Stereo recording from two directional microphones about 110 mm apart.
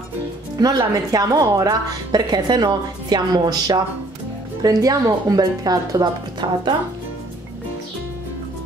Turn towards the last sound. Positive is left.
turn(degrees=-40)  # may be behind; listen again after turning